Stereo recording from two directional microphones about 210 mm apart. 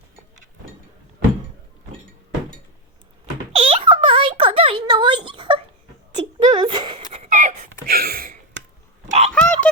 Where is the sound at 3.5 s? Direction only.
25° right (ahead or behind).